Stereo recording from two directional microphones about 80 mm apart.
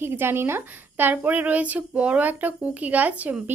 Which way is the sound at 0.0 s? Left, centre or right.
Right.